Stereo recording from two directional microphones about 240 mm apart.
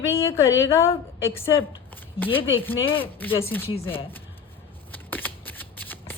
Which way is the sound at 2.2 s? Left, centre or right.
Left.